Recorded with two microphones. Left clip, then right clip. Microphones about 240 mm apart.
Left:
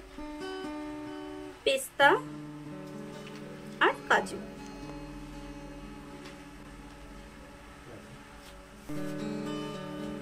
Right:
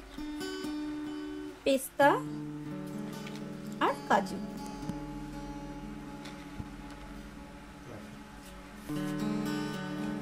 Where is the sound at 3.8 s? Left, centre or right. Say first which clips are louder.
Left 3 dB; right.